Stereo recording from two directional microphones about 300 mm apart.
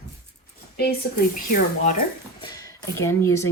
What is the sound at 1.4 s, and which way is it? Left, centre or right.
Speech, left.